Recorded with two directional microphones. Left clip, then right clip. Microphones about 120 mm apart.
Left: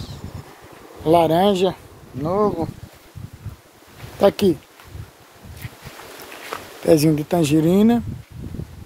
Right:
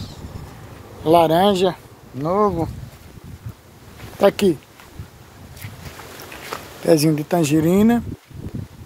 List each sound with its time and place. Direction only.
1.0 s speech: 5° left (ahead or behind)
4.2 s speech: 25° left (ahead or behind)
6.8 s speech: 25° left (ahead or behind)